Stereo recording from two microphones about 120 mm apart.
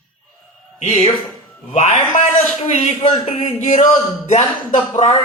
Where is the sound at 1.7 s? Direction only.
90° left.